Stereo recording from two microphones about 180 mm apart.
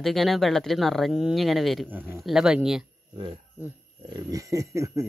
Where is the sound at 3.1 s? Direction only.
30° right (ahead or behind).